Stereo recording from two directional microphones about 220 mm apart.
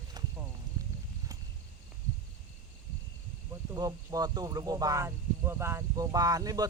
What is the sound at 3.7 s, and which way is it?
Speech, 15° right (ahead or behind).